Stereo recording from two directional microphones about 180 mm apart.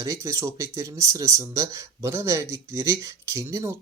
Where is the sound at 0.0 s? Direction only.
15° right (ahead or behind).